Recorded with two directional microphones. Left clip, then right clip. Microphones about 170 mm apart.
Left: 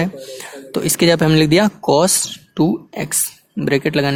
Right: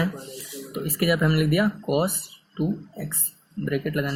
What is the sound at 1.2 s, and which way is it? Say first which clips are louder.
Speech: left 10 dB; 70° left (ahead or behind).